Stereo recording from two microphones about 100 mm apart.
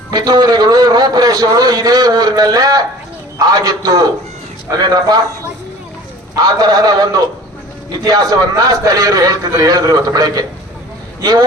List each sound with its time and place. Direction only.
0.1 s a man's voice: 45° right (ahead or behind)
6.3 s a man's voice: 40° right (ahead or behind)